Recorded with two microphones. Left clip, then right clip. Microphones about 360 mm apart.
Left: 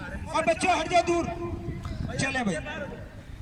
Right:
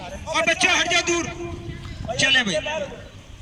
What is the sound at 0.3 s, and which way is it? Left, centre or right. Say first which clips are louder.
A man's voice: right 5 dB; centre.